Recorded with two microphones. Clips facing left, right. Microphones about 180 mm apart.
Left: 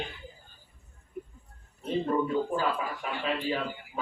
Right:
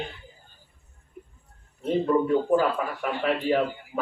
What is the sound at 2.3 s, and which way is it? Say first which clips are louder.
Speech: right 7 dB; 60° right (ahead or behind).